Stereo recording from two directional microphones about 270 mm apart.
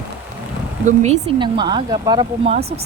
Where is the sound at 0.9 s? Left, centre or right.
Right.